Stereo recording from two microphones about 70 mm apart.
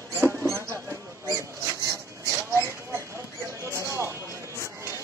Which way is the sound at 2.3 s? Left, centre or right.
Right.